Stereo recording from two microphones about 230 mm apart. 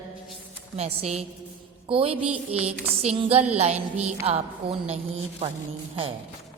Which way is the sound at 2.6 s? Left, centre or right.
Right.